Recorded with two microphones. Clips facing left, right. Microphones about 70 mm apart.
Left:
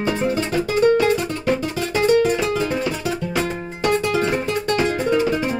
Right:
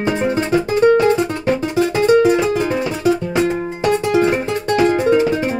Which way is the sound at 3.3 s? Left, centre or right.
Right.